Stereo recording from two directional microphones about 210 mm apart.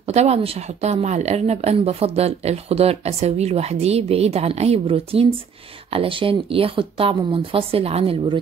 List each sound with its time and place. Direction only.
0.0 s speech: 30° right (ahead or behind)